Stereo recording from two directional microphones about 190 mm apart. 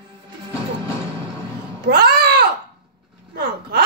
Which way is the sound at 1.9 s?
55° right (ahead or behind).